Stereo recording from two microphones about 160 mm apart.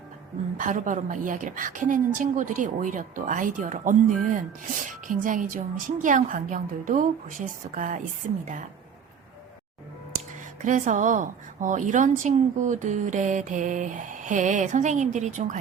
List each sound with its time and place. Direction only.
0.5 s a woman's voice: 55° right (ahead or behind)
10.6 s a woman's voice: 50° right (ahead or behind)